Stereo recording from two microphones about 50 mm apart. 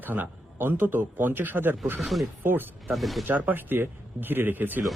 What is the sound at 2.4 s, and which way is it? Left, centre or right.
Speech, right.